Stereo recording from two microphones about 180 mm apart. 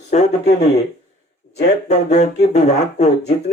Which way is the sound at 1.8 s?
40° left (ahead or behind).